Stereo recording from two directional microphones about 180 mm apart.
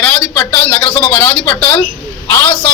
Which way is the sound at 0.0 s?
10° left (ahead or behind).